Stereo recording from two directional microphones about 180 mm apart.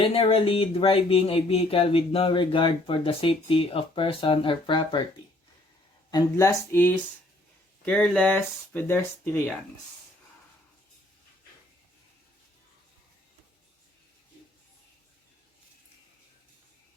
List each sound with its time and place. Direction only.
0.0 s speech: 30° left (ahead or behind)
6.1 s speech: 20° left (ahead or behind)